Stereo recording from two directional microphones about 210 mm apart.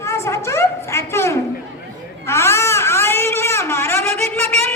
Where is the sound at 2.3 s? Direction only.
15° left (ahead or behind).